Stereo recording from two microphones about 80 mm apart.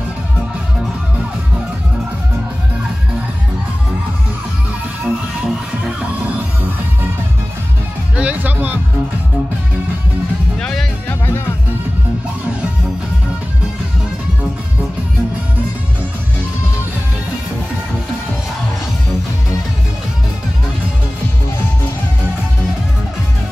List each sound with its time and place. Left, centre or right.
5.0 s music: centre
8.2 s music: centre
10.6 s music: centre
11.1 s music: left